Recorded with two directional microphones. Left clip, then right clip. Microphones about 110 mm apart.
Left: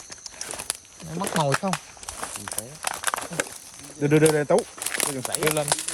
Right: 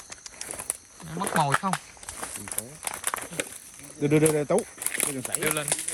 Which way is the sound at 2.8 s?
50° left (ahead or behind).